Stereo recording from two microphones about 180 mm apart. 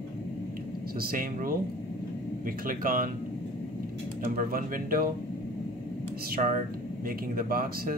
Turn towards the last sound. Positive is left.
turn(degrees=-55)  # may be behind; listen again after turning